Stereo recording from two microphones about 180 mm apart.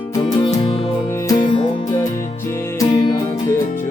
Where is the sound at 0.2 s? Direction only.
25° left (ahead or behind).